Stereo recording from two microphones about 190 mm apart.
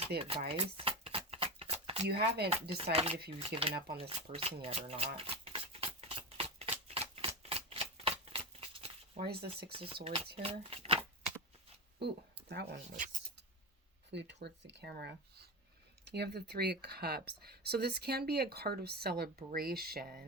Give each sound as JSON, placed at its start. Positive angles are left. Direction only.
{"t": 0.2, "sound": "a sound", "side_deg": -30}
{"t": 2.0, "sound": "speech", "side_deg": -55}
{"t": 2.5, "sound": "speech", "side_deg": -30}
{"t": 3.9, "sound": "shuffling cards", "side_deg": -30}
{"t": 9.2, "sound": "speech", "side_deg": -55}
{"t": 9.7, "sound": "speech", "side_deg": -30}
{"t": 12.0, "sound": "speech", "side_deg": -60}
{"t": 14.1, "sound": "speech", "side_deg": -65}